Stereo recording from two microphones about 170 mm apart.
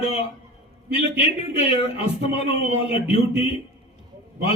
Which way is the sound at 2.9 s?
40° left (ahead or behind).